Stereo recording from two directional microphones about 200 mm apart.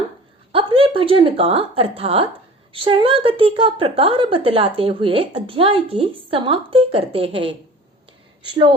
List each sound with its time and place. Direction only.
0.5 s a woman's voice: 25° right (ahead or behind)